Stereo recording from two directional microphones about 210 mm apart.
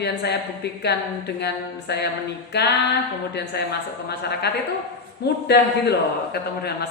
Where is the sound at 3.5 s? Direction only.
50° left (ahead or behind).